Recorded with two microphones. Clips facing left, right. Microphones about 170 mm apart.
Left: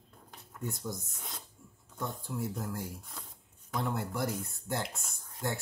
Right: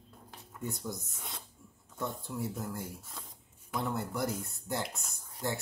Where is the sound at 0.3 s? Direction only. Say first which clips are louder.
Even; centre (ahead or behind).